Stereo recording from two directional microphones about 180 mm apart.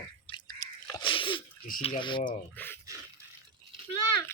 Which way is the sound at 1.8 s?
30° left (ahead or behind).